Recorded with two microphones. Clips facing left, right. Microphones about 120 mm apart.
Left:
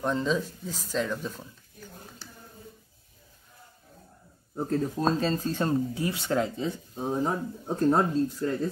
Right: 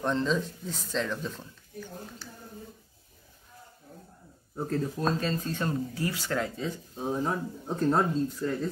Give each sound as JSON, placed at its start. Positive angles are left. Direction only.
{"t": 0.0, "sound": "speech", "side_deg": 5}
{"t": 4.6, "sound": "speech", "side_deg": 20}
{"t": 5.0, "sound": "speech", "side_deg": 30}